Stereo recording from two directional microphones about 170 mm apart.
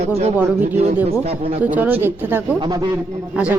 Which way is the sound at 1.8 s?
10° right (ahead or behind).